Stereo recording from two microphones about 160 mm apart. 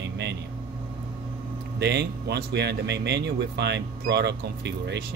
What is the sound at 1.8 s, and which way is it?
Speech, 90° right.